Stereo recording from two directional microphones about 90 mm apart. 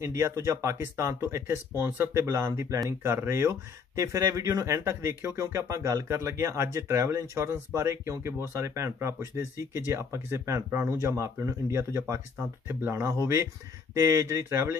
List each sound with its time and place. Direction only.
0.0 s speech: 30° right (ahead or behind)